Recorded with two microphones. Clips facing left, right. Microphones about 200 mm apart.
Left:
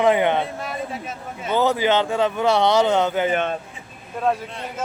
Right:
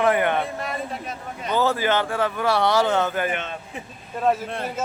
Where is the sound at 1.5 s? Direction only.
15° left (ahead or behind).